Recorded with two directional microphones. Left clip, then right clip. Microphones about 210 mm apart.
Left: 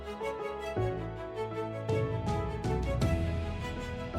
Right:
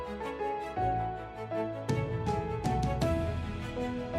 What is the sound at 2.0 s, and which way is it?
Music, centre (ahead or behind).